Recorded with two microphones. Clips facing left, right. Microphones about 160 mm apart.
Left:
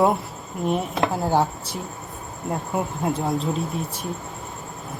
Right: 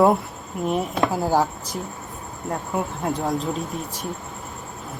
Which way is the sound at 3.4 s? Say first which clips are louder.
Left 1 dB; 35° left (ahead or behind).